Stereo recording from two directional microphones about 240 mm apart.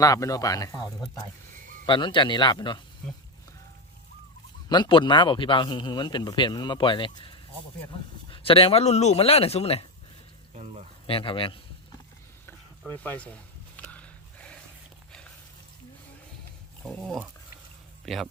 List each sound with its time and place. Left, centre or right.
0.0 s speech: centre
1.9 s speech: centre
4.7 s speech: centre
10.5 s a sound: right
11.0 s speech: left
12.8 s a sound: centre
16.8 s speech: centre